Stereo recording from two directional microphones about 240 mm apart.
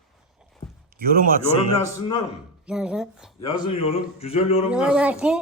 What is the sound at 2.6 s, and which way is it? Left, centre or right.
Speech, centre.